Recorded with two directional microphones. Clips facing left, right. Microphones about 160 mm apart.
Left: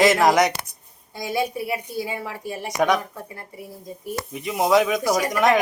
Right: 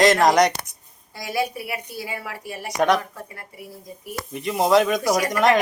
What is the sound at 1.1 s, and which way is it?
A woman's voice, 25° left (ahead or behind).